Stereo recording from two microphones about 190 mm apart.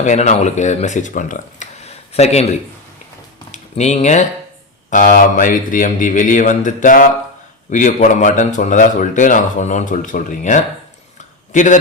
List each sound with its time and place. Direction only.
0.0 s a man's voice: 40° left (ahead or behind)